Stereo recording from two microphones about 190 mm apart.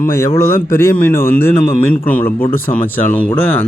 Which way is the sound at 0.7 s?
15° left (ahead or behind).